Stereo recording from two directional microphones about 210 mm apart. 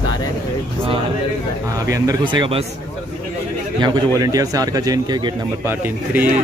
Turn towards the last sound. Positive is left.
turn(degrees=-10)  # may be behind; listen again after turning